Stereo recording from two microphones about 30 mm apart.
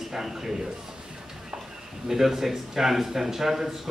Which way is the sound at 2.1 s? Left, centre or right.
Centre.